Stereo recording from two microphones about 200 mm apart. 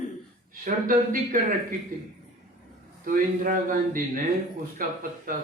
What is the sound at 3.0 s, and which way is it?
A man's voice, 45° right (ahead or behind).